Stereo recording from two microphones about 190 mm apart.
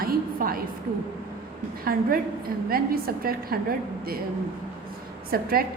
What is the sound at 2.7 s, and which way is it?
Speech, 50° right (ahead or behind).